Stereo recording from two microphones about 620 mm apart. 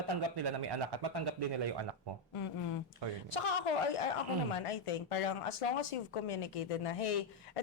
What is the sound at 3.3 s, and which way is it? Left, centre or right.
Speech, left.